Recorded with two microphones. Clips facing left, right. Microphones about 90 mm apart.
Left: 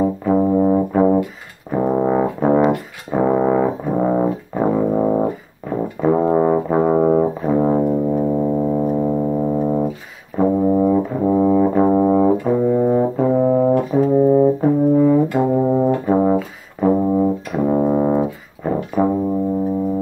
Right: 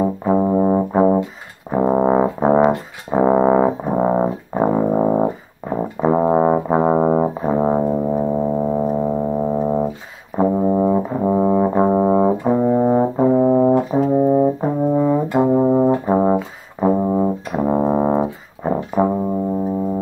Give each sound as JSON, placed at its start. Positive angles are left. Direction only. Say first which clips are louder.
{"t": 0.0, "sound": "brass instrument", "louder": "left 1 dB", "side_deg": -20}
{"t": 8.1, "sound": "music", "louder": "left 1 dB", "side_deg": -15}
{"t": 10.4, "sound": "brass instrument", "louder": "left 1 dB", "side_deg": -15}
{"t": 13.3, "sound": "brass instrument", "louder": "right 1 dB", "side_deg": -10}